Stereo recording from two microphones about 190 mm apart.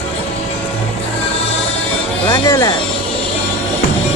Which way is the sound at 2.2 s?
15° left (ahead or behind).